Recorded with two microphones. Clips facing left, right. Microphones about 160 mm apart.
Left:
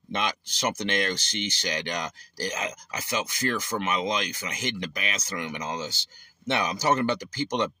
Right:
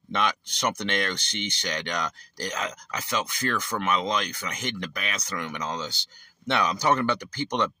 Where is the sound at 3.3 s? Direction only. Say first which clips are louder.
Even; 60° right (ahead or behind).